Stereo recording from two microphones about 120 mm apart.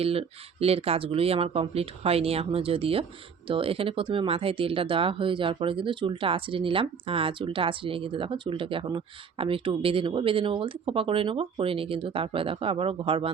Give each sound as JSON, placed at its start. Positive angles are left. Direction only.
{"t": 0.0, "sound": "speech", "side_deg": -55}